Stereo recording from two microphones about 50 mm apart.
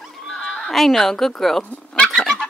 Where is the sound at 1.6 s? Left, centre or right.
Left.